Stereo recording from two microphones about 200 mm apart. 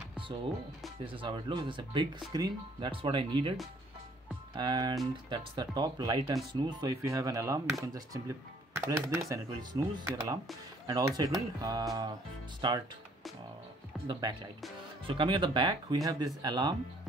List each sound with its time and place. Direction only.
1.0 s speech: 25° right (ahead or behind)
4.6 s speech: 20° right (ahead or behind)
13.9 s music: centre (ahead or behind)
15.0 s speech: 25° right (ahead or behind)